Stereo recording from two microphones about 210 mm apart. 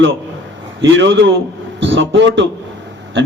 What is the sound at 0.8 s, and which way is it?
A man's voice, 60° right (ahead or behind).